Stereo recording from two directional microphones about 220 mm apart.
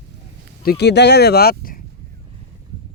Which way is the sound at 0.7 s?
50° left (ahead or behind).